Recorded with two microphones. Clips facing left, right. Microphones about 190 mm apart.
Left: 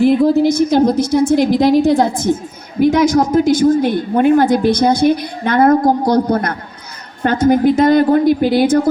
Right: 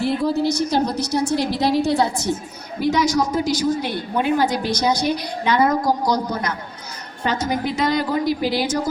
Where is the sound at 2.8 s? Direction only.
55° left (ahead or behind).